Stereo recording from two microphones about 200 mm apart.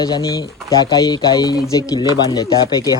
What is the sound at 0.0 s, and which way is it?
Speech, 20° left (ahead or behind).